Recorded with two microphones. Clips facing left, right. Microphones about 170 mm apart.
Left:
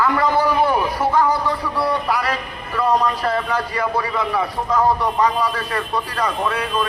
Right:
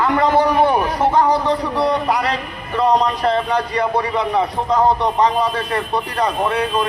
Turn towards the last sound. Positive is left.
turn(degrees=-25)  # may be behind; listen again after turning